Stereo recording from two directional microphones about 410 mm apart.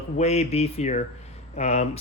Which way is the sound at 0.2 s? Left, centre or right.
Centre.